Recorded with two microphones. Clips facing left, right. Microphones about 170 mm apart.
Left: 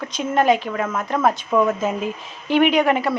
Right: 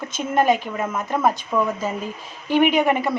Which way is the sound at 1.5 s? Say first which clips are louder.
Left 6 dB; 5° left (ahead or behind).